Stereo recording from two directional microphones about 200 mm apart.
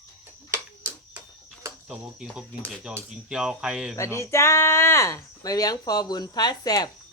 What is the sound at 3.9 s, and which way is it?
Speech, 15° left (ahead or behind).